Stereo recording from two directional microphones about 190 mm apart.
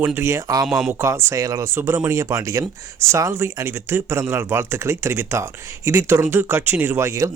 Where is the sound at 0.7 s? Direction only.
Centre (ahead or behind).